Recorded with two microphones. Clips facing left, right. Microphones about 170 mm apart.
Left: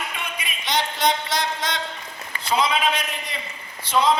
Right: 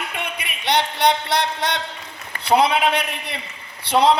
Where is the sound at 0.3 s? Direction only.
65° right (ahead or behind).